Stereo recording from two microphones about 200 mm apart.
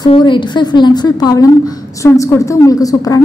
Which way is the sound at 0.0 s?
25° left (ahead or behind).